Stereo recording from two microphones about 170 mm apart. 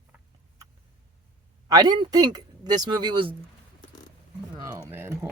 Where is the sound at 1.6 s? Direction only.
20° right (ahead or behind).